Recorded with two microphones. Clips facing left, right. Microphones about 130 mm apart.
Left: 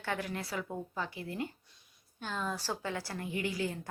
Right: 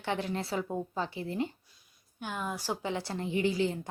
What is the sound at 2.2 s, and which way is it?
A woman's voice, 15° right (ahead or behind).